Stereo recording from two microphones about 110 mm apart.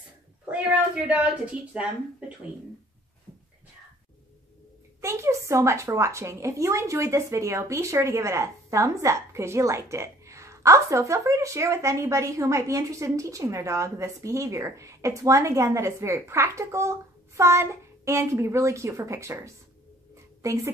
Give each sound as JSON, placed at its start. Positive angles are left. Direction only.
{"t": 0.5, "sound": "a woman's voice", "side_deg": -10}
{"t": 5.0, "sound": "a woman's voice", "side_deg": -25}